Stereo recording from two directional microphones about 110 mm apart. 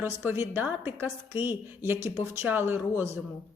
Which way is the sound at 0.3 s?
20° right (ahead or behind).